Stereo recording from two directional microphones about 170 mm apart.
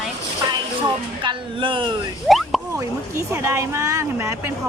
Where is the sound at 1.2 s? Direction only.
30° right (ahead or behind).